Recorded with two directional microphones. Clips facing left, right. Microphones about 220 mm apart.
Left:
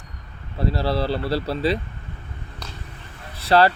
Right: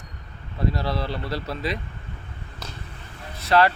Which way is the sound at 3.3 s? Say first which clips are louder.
Left 2 dB; 30° left (ahead or behind).